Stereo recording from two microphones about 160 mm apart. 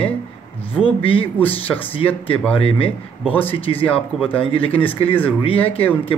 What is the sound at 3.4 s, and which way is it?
Speech, 35° left (ahead or behind).